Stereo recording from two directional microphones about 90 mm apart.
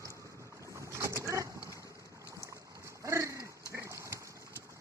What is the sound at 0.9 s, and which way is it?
Boat, 30° right (ahead or behind).